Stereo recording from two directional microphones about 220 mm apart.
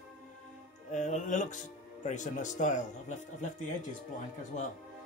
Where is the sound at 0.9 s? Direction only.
35° left (ahead or behind).